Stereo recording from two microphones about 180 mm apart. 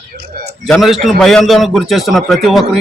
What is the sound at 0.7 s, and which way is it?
A man's voice, centre (ahead or behind).